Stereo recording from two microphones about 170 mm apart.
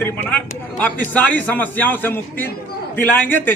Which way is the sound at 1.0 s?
10° left (ahead or behind).